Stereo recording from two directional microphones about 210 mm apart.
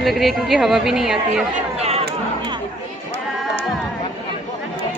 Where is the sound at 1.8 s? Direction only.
30° right (ahead or behind).